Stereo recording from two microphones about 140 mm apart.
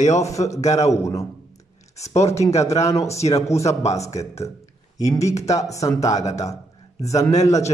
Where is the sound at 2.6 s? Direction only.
20° left (ahead or behind).